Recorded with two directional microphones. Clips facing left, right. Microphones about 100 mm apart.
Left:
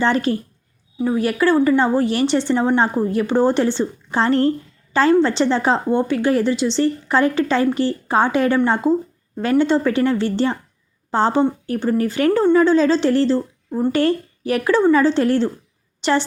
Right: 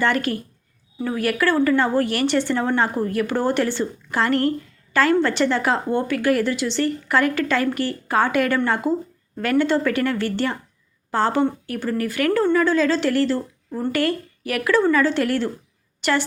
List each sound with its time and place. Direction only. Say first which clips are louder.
0.0 s a woman's voice: left 3 dB; 25° left (ahead or behind)